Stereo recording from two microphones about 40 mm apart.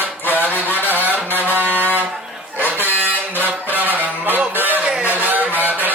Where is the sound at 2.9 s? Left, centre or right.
Right.